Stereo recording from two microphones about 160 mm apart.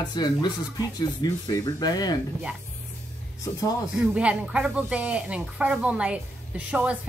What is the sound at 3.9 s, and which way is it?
Speech, 10° right (ahead or behind).